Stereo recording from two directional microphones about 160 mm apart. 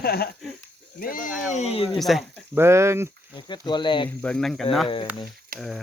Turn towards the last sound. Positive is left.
turn(degrees=0)  # may be behind; listen again after turning